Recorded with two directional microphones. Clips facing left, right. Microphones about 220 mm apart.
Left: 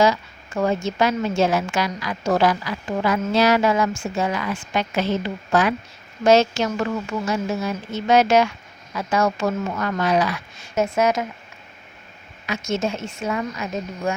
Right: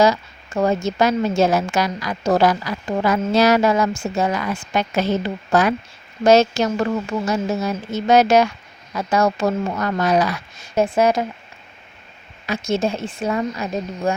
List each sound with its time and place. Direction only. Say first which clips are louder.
0.0 s a woman's voice: right 2 dB; 40° right (ahead or behind)
12.5 s a woman's voice: right 3 dB; 35° right (ahead or behind)